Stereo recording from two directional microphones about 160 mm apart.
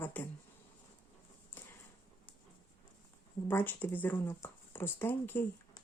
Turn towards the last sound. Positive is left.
turn(degrees=15)  # may be behind; listen again after turning